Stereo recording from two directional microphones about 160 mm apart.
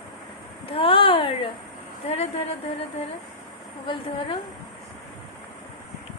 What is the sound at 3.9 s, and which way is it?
Speech, 35° left (ahead or behind).